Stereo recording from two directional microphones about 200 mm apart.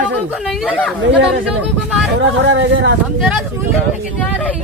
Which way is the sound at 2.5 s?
65° right (ahead or behind).